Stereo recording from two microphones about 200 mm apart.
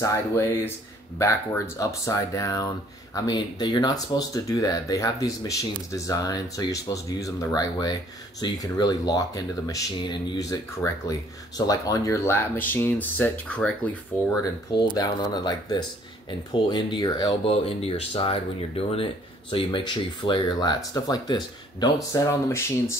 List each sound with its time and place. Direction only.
0.0 s speech: 15° left (ahead or behind)
15.0 s speech: 20° left (ahead or behind)